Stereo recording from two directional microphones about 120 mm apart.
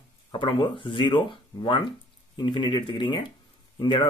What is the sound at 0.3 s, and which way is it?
Speech, 40° left (ahead or behind).